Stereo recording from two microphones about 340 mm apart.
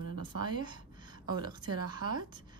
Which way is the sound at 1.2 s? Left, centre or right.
Centre.